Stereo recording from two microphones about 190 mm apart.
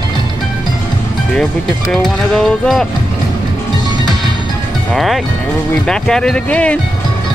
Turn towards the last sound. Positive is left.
turn(degrees=5)  # may be behind; listen again after turning